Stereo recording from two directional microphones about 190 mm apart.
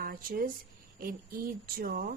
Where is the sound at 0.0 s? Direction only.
50° right (ahead or behind).